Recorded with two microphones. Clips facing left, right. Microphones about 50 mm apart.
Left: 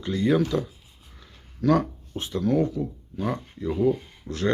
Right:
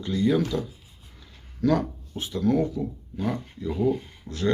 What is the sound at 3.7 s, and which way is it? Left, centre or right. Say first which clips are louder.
Speech: left 2 dB; centre.